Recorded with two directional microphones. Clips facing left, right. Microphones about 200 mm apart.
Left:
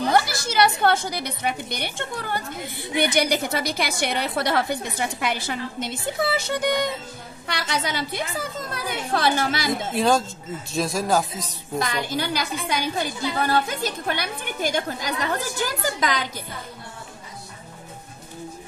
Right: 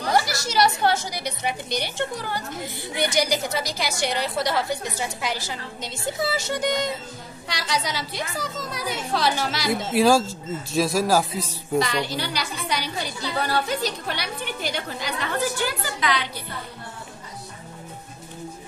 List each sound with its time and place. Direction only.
0.1 s a woman's voice: 55° left (ahead or behind)
9.7 s speech: 5° right (ahead or behind)
11.8 s a woman's voice: 50° left (ahead or behind)